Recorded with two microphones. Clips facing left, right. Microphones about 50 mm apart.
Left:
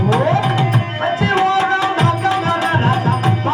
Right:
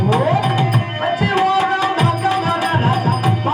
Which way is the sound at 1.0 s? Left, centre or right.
Centre.